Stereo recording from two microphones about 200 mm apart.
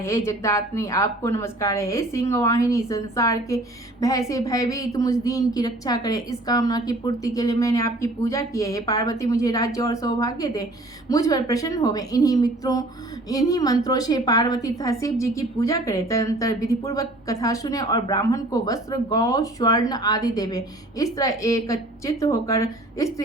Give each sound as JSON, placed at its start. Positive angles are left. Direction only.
{"t": 0.0, "sound": "a woman's voice", "side_deg": 15}